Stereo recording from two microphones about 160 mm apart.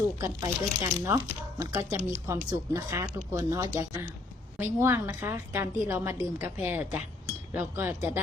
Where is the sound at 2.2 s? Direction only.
15° right (ahead or behind).